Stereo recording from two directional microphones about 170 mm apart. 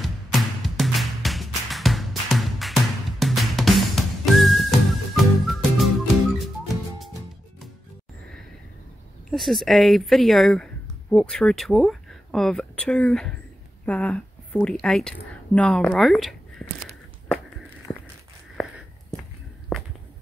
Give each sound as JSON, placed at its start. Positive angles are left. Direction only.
{"t": 0.0, "sound": "music", "side_deg": 0}
{"t": 9.3, "sound": "a woman's voice", "side_deg": 0}
{"t": 17.9, "sound": "walk", "side_deg": 20}
{"t": 19.7, "sound": "a sound", "side_deg": 5}